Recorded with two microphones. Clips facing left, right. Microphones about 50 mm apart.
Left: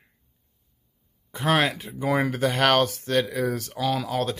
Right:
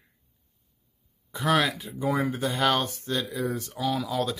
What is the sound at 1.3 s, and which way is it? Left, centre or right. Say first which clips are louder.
Speech: left 2 dB; left.